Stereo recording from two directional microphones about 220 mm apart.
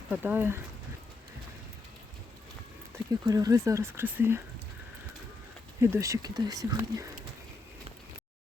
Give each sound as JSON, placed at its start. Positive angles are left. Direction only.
{"t": 0.1, "sound": "speech", "side_deg": -10}
{"t": 2.9, "sound": "speech", "side_deg": -15}
{"t": 5.8, "sound": "speech", "side_deg": -15}